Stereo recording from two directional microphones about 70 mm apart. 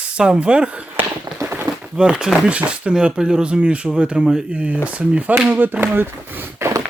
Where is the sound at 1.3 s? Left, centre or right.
Right.